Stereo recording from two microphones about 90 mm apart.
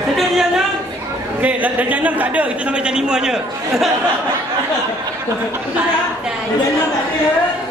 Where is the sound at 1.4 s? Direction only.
15° right (ahead or behind).